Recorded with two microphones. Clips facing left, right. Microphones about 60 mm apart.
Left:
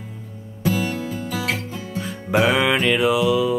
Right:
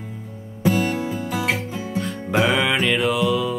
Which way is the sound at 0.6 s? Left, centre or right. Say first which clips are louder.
Right 2 dB; right.